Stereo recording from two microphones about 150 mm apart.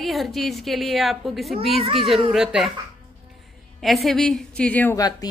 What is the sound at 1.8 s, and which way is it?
Speech, 35° right (ahead or behind).